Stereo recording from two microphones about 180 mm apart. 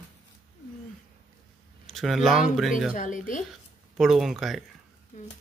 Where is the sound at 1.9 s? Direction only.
Centre (ahead or behind).